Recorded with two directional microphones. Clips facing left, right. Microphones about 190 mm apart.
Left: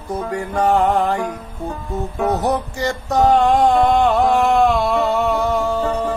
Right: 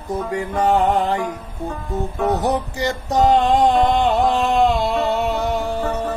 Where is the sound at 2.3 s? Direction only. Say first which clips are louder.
Left 1 dB; 15° right (ahead or behind).